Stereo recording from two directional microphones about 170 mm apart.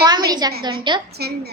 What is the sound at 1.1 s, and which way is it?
Speech, 70° right (ahead or behind).